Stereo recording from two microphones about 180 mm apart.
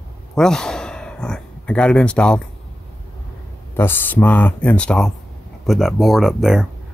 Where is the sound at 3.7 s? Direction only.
10° left (ahead or behind).